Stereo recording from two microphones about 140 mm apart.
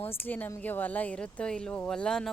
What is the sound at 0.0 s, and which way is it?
A woman's voice, 15° left (ahead or behind).